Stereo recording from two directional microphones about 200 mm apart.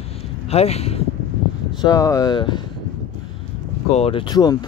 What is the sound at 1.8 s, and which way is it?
Speech, 20° left (ahead or behind).